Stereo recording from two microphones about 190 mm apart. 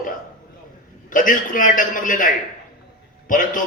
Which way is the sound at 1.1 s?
45° left (ahead or behind).